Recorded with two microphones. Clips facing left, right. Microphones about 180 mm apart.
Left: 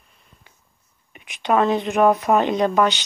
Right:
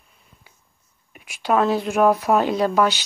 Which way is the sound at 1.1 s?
5° right (ahead or behind).